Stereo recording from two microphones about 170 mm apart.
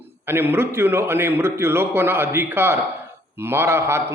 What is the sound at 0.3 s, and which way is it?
A man's voice, 15° right (ahead or behind).